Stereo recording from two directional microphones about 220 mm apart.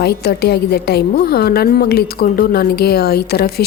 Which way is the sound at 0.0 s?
45° left (ahead or behind).